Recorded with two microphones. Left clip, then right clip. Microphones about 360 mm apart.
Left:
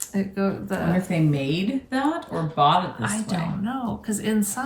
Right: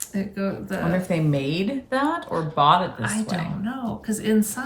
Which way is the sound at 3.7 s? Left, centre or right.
Centre.